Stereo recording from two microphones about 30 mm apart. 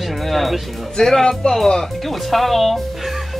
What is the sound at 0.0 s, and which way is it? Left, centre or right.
Music, centre.